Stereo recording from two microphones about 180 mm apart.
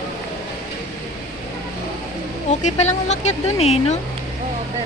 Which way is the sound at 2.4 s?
40° left (ahead or behind).